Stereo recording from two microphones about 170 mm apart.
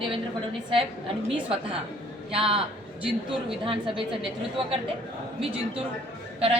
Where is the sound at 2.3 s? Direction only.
35° right (ahead or behind).